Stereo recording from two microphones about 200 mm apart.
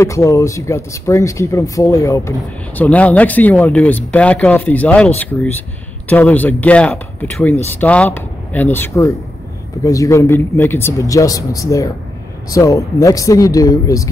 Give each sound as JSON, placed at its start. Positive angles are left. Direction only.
{"t": 0.0, "sound": "speech", "side_deg": 15}